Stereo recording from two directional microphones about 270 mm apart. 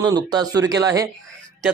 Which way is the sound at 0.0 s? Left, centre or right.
Centre.